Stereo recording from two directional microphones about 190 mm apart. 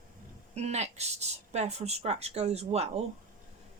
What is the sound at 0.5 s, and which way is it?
Speech, 35° right (ahead or behind).